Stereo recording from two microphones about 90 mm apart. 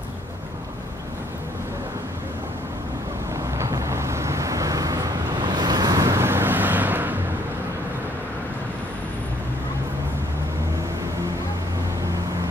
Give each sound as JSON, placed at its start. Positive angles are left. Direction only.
{"t": 3.5, "sound": "vehicle", "side_deg": -35}